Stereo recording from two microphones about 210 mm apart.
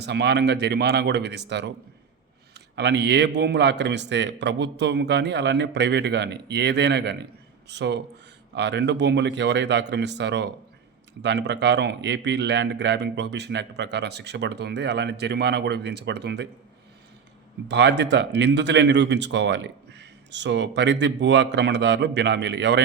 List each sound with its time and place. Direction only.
0.0 s speech: 55° right (ahead or behind)
2.7 s speech: 55° right (ahead or behind)
17.7 s speech: 55° right (ahead or behind)